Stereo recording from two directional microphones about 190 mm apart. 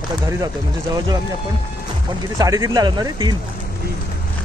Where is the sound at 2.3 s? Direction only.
20° right (ahead or behind).